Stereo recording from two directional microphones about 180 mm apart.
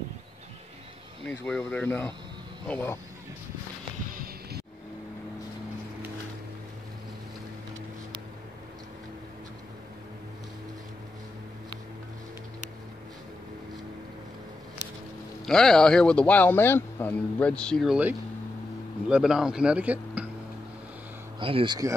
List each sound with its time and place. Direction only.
1.2 s speech: 5° left (ahead or behind)
4.1 s music: 55° right (ahead or behind)
15.4 s speech: centre (ahead or behind)
21.4 s speech: 30° right (ahead or behind)